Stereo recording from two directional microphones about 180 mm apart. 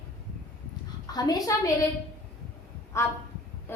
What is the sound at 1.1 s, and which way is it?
Speech, 20° left (ahead or behind).